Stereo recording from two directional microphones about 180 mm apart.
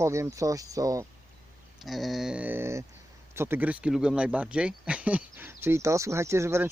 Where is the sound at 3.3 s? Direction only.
10° right (ahead or behind).